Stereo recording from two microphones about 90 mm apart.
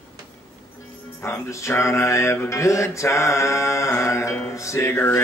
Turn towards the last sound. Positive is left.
turn(degrees=25)  # may be behind; listen again after turning